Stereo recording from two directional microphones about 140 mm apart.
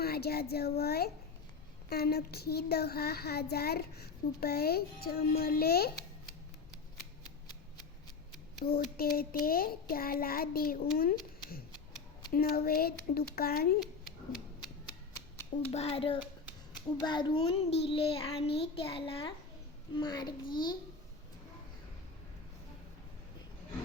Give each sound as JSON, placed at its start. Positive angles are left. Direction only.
{"t": 0.0, "sound": "child singing", "side_deg": 90}
{"t": 8.6, "sound": "child singing", "side_deg": 90}
{"t": 10.9, "sound": "speech", "side_deg": 90}
{"t": 12.3, "sound": "child singing", "side_deg": 90}
{"t": 13.8, "sound": "a sound", "side_deg": 0}
{"t": 15.7, "sound": "a child's voice", "side_deg": 45}